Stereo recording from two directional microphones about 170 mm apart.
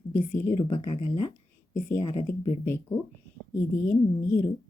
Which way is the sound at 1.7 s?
15° left (ahead or behind).